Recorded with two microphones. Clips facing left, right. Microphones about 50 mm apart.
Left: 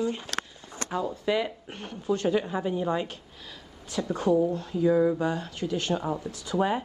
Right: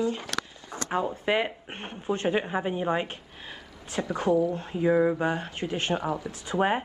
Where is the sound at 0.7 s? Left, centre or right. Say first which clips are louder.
Right 3 dB; right.